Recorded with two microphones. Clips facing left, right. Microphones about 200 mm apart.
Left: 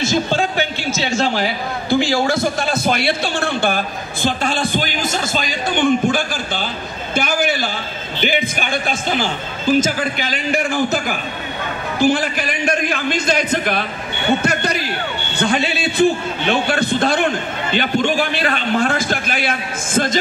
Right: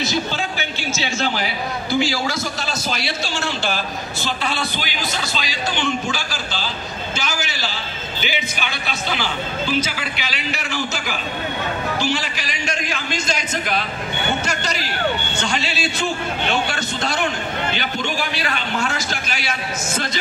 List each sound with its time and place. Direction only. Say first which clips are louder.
0.0 s a man's voice: left 5 dB; 50° left (ahead or behind)
1.9 s a man's voice: left 5 dB; 55° left (ahead or behind)